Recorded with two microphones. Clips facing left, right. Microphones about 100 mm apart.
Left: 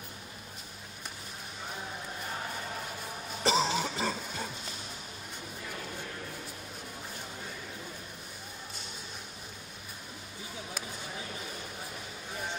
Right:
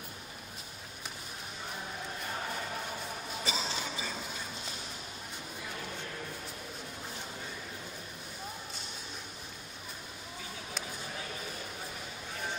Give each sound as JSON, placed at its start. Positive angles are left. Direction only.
{"t": 3.4, "sound": "cough", "side_deg": 70}